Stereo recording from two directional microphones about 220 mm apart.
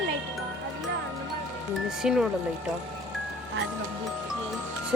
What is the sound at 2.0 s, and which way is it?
Speech, 5° right (ahead or behind).